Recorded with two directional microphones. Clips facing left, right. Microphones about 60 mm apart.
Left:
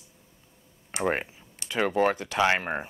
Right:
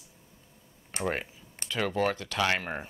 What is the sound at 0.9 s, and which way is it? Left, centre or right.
Speech, left.